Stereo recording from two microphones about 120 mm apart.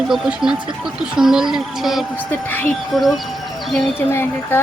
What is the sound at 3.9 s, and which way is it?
Speech, 20° left (ahead or behind).